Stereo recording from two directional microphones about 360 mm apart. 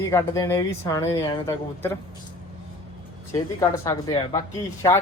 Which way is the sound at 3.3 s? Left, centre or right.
Centre.